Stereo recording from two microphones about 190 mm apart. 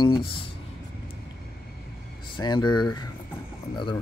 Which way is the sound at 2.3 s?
25° left (ahead or behind).